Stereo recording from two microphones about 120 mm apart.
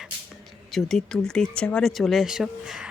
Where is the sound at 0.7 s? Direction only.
Centre (ahead or behind).